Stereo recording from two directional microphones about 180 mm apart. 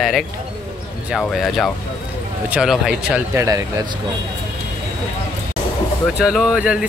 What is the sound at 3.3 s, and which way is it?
Speech, 20° right (ahead or behind).